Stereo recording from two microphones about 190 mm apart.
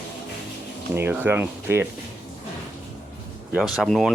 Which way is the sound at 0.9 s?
10° right (ahead or behind).